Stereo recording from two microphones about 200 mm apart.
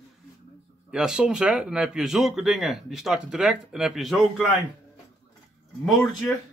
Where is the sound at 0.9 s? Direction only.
5° right (ahead or behind).